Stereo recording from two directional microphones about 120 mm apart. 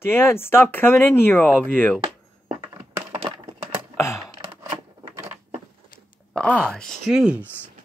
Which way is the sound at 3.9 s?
25° left (ahead or behind).